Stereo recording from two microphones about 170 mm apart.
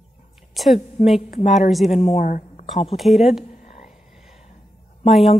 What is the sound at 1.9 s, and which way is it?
Speech, 40° left (ahead or behind).